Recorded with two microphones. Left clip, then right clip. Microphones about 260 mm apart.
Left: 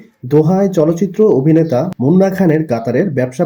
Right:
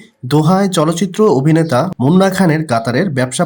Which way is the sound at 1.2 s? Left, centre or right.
Right.